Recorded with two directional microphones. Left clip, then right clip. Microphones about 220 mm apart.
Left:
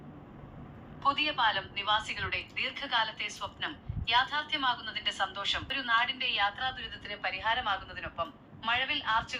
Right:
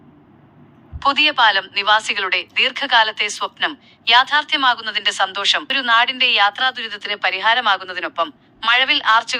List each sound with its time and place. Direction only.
0.9 s a woman's voice: 45° right (ahead or behind)